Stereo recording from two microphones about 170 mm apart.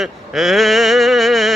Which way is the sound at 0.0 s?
Centre (ahead or behind).